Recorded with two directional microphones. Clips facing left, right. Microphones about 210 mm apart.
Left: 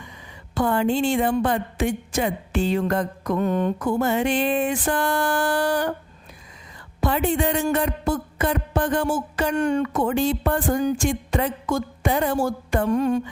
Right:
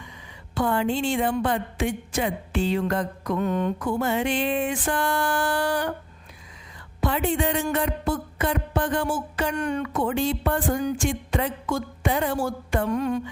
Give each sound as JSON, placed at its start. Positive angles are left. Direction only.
{"t": 0.5, "sound": "a woman's voice", "side_deg": 45}
{"t": 7.0, "sound": "a woman's voice", "side_deg": 40}
{"t": 9.6, "sound": "a woman's voice", "side_deg": 30}
{"t": 9.9, "sound": "a woman's voice", "side_deg": 45}